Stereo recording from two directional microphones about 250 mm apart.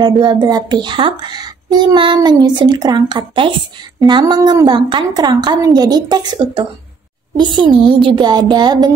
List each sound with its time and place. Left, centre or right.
0.0 s speech: centre